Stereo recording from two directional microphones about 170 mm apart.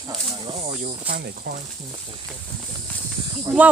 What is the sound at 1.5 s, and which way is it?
Speech, 55° right (ahead or behind).